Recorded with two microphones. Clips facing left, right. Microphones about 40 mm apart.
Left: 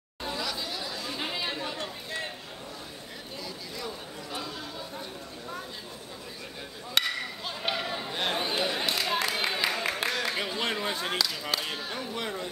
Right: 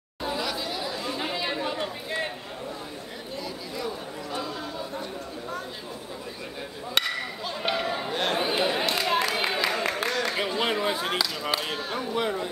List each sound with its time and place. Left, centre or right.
0.2 s chatter: centre
1.1 s chatter: centre
1.5 s chatter: centre
4.3 s chatter: centre
7.0 s a sound: centre
8.1 s chatter: centre
8.8 s a sound: centre
10.4 s speech: centre